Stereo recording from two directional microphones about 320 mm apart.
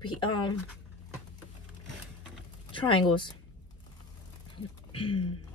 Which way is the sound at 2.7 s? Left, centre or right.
Centre.